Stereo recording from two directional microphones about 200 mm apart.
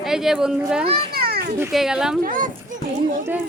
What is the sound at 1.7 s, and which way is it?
Speech, centre (ahead or behind).